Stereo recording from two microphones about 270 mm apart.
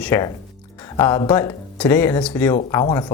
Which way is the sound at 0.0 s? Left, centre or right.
Centre.